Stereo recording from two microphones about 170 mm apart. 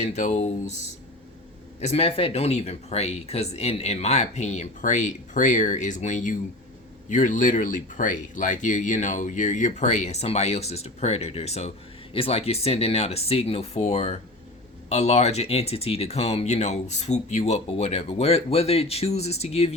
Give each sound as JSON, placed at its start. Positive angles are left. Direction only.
{"t": 0.0, "sound": "speech", "side_deg": 40}
{"t": 1.8, "sound": "speech", "side_deg": 40}